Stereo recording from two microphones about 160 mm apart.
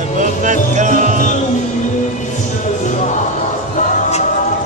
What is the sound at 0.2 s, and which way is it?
Music, 50° right (ahead or behind).